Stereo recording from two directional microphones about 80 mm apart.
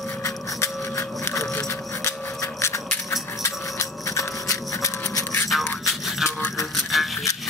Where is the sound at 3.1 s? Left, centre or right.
Left.